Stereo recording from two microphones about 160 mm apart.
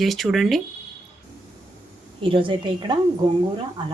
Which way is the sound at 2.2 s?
30° right (ahead or behind).